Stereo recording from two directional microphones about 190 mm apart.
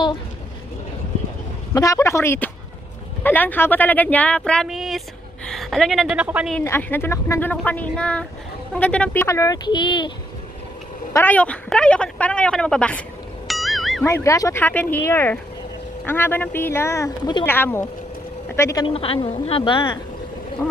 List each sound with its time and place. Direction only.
1.7 s speech: 15° left (ahead or behind); by 6.5 s 5° right (ahead or behind)
6.6 s speech: 10° left (ahead or behind)
11.1 s speech: 10° left (ahead or behind)
13.5 s music: centre (ahead or behind)
14.0 s speech: 15° left (ahead or behind)
18.9 s a woman's voice: 30° left (ahead or behind)